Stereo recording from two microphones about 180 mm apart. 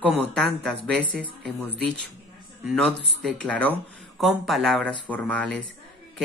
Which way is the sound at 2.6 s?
Centre (ahead or behind).